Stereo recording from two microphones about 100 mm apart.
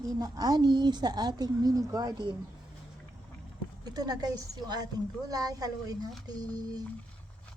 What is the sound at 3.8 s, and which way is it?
A woman's voice, 40° right (ahead or behind).